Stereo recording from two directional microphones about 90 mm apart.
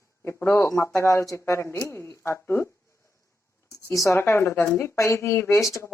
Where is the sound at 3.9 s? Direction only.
35° left (ahead or behind).